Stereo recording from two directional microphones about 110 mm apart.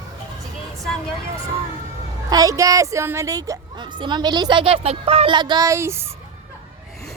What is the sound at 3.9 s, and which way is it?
Speech, 45° right (ahead or behind).